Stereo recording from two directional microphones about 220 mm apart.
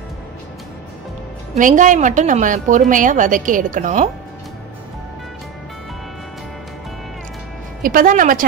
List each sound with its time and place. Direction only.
1.6 s a woman's voice: 35° right (ahead or behind)
7.8 s a woman's voice: 40° right (ahead or behind)